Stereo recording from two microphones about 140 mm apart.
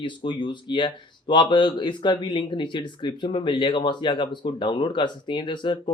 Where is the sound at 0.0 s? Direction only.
35° left (ahead or behind).